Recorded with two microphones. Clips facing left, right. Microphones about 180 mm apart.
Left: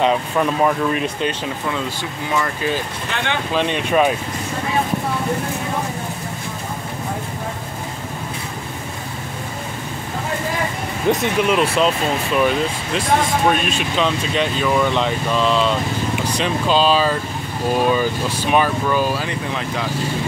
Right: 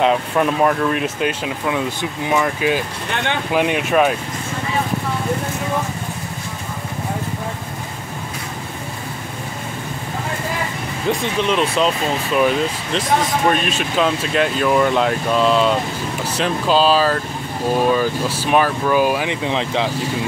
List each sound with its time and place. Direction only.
0.0 s speech: 5° right (ahead or behind)
11.1 s speech: 15° left (ahead or behind)
11.4 s speech: 5° left (ahead or behind); by 19.9 s 25° right (ahead or behind)